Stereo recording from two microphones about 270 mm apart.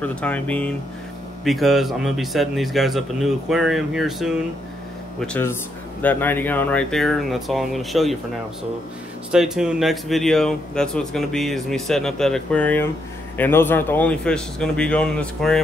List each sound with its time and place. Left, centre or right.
0.0 s speech: centre
9.3 s speech: centre